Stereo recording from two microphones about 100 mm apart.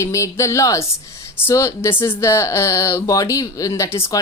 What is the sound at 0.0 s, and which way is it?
A woman's voice, 30° left (ahead or behind).